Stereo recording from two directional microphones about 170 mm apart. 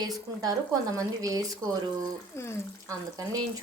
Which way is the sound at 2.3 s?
15° left (ahead or behind).